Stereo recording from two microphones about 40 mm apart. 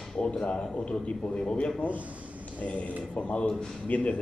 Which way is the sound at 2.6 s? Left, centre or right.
Left.